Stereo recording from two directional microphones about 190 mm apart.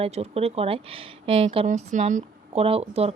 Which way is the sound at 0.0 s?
35° right (ahead or behind).